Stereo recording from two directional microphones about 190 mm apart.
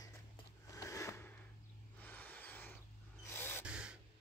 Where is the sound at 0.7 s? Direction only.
15° left (ahead or behind).